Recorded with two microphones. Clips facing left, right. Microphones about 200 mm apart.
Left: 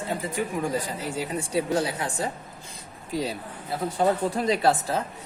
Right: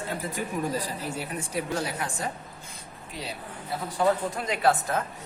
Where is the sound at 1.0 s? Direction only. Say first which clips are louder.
Left 4 dB; 85° left.